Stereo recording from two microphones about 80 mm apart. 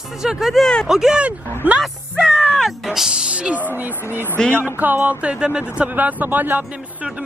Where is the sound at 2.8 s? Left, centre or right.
Centre.